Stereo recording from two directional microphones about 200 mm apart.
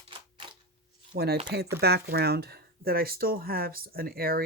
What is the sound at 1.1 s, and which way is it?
Speech, 55° right (ahead or behind).